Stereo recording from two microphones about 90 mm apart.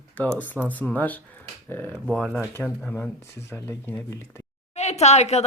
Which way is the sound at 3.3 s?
30° left (ahead or behind).